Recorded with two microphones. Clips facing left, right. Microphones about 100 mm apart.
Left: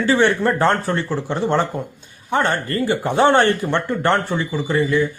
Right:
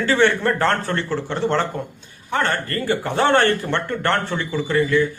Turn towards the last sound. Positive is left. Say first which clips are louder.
# even
turn(degrees=15)  # may be behind; listen again after turning